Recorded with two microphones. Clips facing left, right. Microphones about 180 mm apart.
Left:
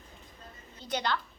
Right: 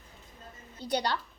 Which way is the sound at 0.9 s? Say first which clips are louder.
Right 2 dB; 35° right (ahead or behind).